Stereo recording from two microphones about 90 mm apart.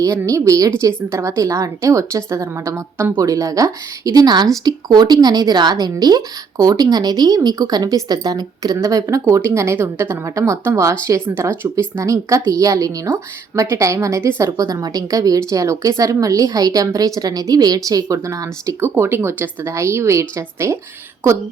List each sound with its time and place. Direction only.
0.3 s a woman's voice: 35° right (ahead or behind)
18.8 s a woman's voice: 25° right (ahead or behind)